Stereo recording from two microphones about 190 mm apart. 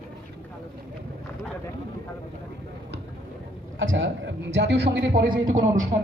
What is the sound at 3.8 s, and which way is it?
A man's voice, 85° right.